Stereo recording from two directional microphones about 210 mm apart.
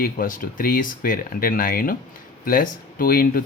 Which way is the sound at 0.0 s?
40° left (ahead or behind).